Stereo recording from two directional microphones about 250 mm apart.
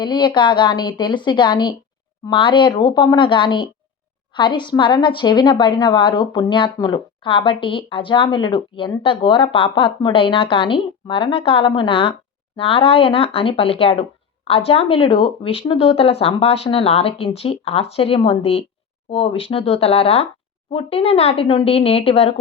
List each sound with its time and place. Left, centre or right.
0.0 s a woman's voice: centre